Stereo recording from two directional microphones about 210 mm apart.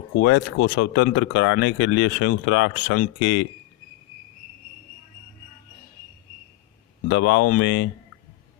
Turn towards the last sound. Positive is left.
turn(degrees=55)  # may be behind; listen again after turning